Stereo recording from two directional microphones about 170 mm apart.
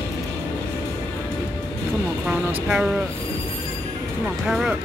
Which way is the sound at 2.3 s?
5° right (ahead or behind).